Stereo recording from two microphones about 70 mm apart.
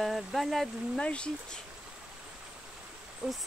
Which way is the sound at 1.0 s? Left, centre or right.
Centre.